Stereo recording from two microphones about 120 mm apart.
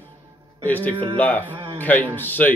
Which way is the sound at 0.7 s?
15° left (ahead or behind).